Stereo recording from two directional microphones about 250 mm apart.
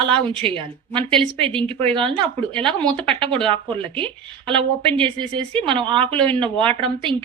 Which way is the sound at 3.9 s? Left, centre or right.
Centre.